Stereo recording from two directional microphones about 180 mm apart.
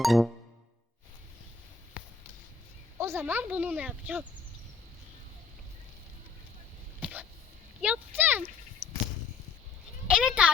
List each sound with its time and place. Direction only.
0.0 s music: centre (ahead or behind)
3.0 s speech: 15° right (ahead or behind)
7.0 s a sound: 10° right (ahead or behind)
7.8 s speech: 10° right (ahead or behind)
8.8 s a sound: 20° right (ahead or behind)
10.1 s speech: 5° right (ahead or behind)